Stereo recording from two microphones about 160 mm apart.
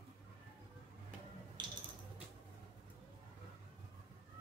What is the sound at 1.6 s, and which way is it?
Music, 30° right (ahead or behind).